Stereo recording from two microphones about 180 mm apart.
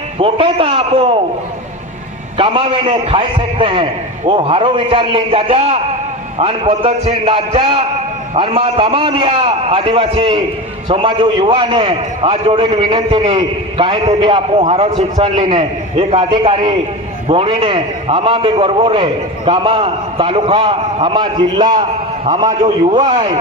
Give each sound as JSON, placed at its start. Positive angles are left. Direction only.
{"t": 0.2, "sound": "a man's voice", "side_deg": -30}
{"t": 2.4, "sound": "a man's voice", "side_deg": -30}
{"t": 22.6, "sound": "a man's voice", "side_deg": -40}
{"t": 23.0, "sound": "a man's voice", "side_deg": -30}